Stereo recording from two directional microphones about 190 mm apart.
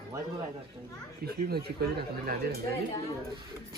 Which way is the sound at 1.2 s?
55° right (ahead or behind).